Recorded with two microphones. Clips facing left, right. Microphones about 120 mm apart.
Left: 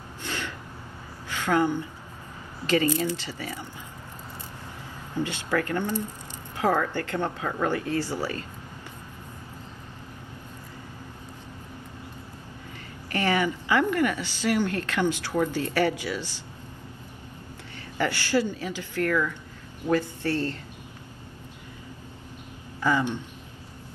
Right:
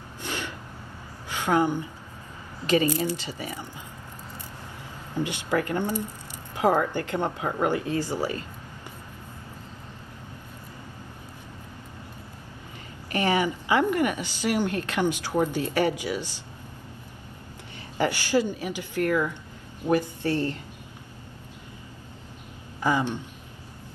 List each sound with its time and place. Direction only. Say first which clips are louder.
0.3 s a sound: right 1 dB; 15° right (ahead or behind)
1.3 s a woman's voice: right 1 dB; 15° right (ahead or behind)
5.1 s a woman's voice: right 1 dB; 15° right (ahead or behind)
13.1 s a woman's voice: right 1 dB; 20° right (ahead or behind)
17.9 s a woman's voice: right 1 dB; 15° right (ahead or behind)
22.8 s speech: even; 15° right (ahead or behind)